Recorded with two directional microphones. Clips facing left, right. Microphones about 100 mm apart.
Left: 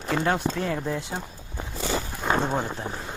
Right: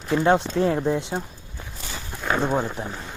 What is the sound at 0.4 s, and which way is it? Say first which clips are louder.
Speech: right 1 dB; 25° left (ahead or behind).